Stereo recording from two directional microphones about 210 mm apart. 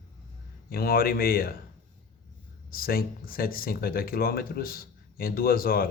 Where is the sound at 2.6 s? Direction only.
45° left (ahead or behind).